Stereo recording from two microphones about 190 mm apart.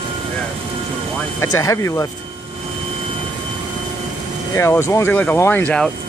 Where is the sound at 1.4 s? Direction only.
15° left (ahead or behind).